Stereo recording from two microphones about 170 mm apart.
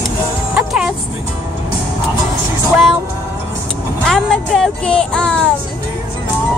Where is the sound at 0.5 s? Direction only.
5° right (ahead or behind).